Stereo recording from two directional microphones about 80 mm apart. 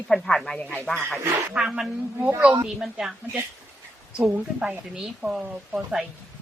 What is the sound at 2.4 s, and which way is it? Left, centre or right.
Speech, right.